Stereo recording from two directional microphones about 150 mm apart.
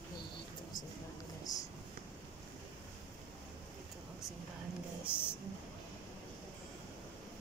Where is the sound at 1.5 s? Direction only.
25° left (ahead or behind).